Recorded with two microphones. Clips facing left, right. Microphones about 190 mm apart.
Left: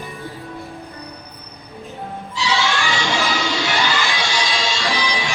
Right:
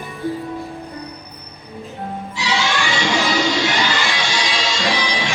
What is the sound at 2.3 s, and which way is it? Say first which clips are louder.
Music: left 2 dB; 15° right (ahead or behind).